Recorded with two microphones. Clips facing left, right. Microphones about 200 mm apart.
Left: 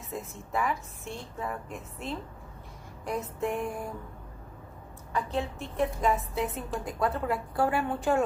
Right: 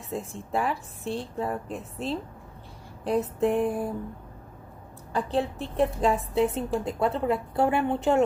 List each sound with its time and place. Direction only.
0.1 s a woman's voice: 30° right (ahead or behind)
5.1 s a woman's voice: 35° right (ahead or behind)